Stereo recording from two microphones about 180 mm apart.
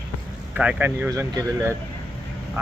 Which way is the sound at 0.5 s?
5° right (ahead or behind).